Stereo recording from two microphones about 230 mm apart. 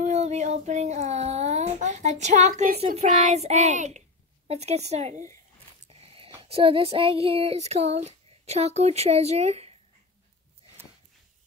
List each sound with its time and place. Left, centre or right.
0.0 s child singing: right
5.9 s a sound: right
6.4 s child singing: right